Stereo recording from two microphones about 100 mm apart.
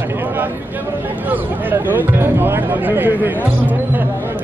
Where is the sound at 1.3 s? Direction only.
20° right (ahead or behind).